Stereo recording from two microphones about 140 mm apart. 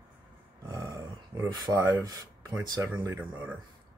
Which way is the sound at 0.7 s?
25° right (ahead or behind).